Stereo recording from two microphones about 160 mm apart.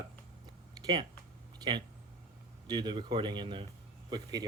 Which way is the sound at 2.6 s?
25° right (ahead or behind).